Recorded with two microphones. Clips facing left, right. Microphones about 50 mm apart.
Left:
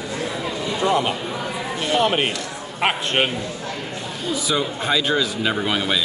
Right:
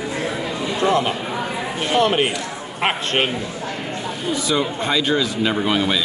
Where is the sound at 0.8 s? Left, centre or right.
Right.